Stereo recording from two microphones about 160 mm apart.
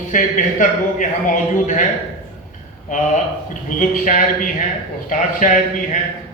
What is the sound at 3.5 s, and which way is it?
A man's voice, 55° left (ahead or behind).